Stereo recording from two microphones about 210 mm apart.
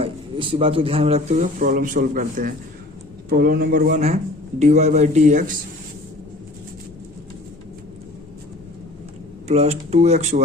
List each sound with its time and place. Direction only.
0.0 s speech: 25° right (ahead or behind)
9.5 s speech: 30° right (ahead or behind)